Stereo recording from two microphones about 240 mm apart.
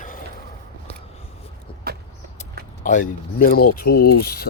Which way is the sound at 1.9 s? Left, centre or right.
Right.